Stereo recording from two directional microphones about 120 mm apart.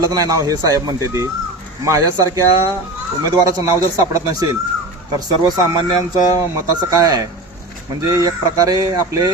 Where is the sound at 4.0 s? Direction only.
30° right (ahead or behind).